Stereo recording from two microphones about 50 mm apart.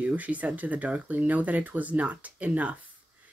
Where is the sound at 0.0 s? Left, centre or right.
Right.